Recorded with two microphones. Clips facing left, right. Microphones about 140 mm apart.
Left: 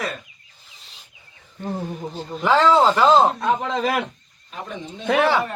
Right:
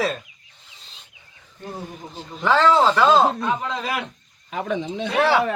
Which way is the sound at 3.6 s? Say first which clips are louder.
Left 4 dB; 55° left (ahead or behind).